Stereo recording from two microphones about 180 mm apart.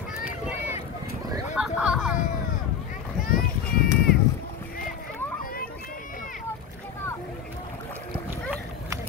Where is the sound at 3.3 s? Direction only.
55° left (ahead or behind).